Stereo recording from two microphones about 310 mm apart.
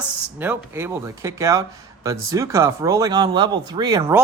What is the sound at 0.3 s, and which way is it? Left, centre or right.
Speech, centre.